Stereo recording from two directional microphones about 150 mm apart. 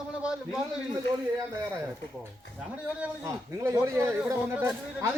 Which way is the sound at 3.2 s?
20° right (ahead or behind).